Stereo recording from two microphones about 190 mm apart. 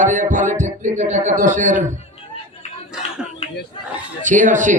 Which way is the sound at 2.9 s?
5° right (ahead or behind).